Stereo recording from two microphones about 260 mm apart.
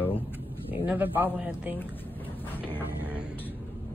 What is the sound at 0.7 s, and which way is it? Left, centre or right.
Speech, centre.